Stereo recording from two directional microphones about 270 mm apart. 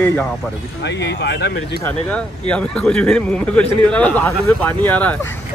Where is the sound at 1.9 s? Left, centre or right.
Centre.